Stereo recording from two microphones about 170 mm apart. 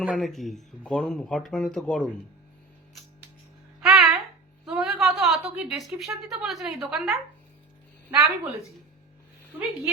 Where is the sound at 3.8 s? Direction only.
Centre (ahead or behind).